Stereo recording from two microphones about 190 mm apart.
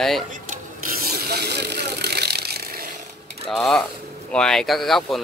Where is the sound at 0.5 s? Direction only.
50° right (ahead or behind).